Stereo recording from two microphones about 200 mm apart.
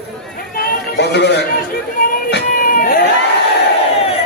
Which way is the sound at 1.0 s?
60° left (ahead or behind).